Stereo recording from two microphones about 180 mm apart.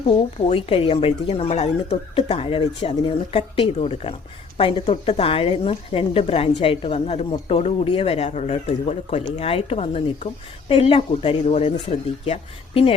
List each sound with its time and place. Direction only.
0.2 s speech: 30° left (ahead or behind)